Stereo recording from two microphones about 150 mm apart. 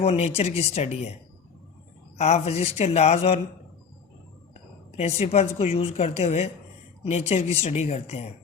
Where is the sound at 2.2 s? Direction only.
45° left (ahead or behind).